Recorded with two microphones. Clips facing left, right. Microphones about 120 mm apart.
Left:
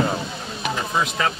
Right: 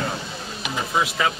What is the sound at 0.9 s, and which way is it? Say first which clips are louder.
Speech: right 1 dB; 5° right (ahead or behind).